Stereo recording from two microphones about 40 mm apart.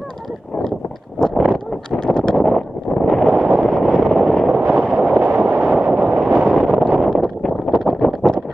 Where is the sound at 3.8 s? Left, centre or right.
Right.